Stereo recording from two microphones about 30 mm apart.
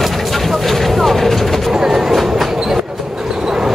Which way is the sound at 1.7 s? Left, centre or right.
Centre.